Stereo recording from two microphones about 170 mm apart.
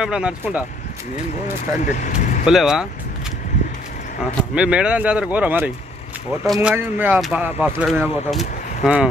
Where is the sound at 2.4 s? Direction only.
5° right (ahead or behind).